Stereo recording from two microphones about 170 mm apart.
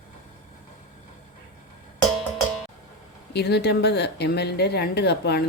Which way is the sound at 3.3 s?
75° left (ahead or behind).